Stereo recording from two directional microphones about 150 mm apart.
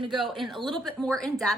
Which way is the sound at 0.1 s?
Centre (ahead or behind).